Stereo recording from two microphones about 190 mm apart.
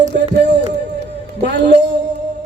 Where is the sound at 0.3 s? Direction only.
65° right (ahead or behind).